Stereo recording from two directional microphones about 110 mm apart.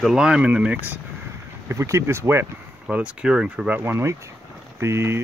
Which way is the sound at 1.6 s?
30° right (ahead or behind).